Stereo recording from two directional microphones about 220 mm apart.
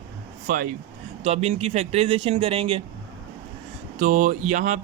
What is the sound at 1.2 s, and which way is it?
Speech, 30° right (ahead or behind).